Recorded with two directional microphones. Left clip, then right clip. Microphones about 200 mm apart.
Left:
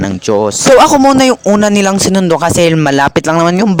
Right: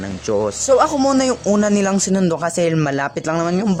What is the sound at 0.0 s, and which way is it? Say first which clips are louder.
Speech: left 8 dB; 40° left (ahead or behind).